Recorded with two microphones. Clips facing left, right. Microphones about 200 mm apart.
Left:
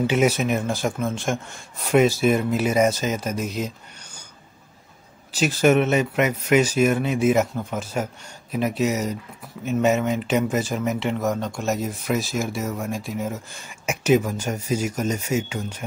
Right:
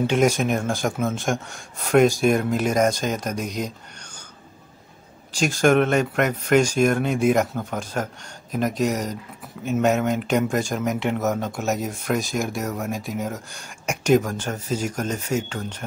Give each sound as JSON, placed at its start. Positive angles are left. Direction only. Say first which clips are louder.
{"t": 0.0, "sound": "speech", "louder": "even", "side_deg": 5}
{"t": 5.3, "sound": "speech", "louder": "even", "side_deg": 5}